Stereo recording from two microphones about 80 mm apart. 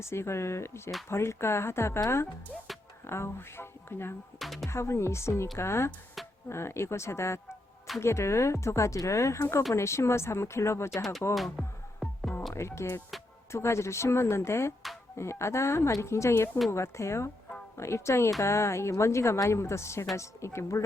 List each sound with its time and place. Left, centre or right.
0.0 s a woman's voice: left
3.1 s a woman's voice: left
4.4 s speech: centre
4.7 s a woman's voice: left
11.3 s music: centre
12.5 s a woman's voice: left